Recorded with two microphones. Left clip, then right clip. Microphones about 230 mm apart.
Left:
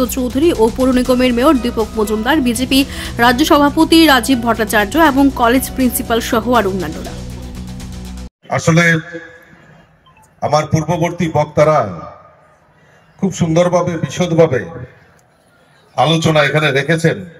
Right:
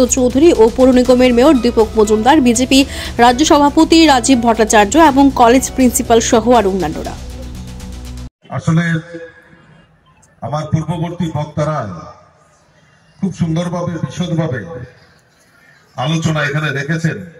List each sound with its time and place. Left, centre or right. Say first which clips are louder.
0.0 s speech: right 5 dB; centre
8.6 s a man's voice: left 7 dB; left
10.7 s a man's voice: left 6 dB; left
13.2 s a man's voice: left 8 dB; left
16.0 s a man's voice: left 6 dB; left